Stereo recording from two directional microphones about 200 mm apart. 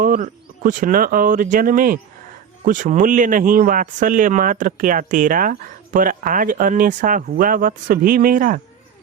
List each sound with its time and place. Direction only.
0.0 s speech: 45° right (ahead or behind)